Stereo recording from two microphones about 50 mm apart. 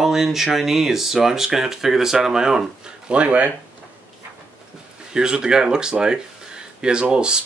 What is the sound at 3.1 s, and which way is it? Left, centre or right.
Speech, right.